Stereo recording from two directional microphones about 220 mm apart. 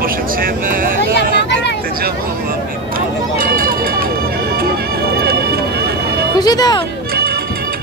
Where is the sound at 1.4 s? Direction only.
50° left (ahead or behind).